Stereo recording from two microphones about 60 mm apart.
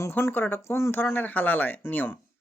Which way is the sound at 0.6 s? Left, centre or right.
Left.